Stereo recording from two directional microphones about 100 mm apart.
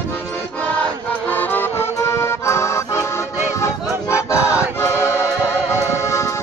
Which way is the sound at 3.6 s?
30° left (ahead or behind).